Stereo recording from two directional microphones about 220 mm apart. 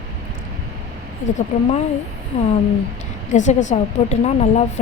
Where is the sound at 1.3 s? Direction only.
30° left (ahead or behind).